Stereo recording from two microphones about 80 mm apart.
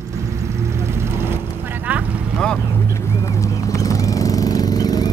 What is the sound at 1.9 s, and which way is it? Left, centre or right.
Vehicle, centre.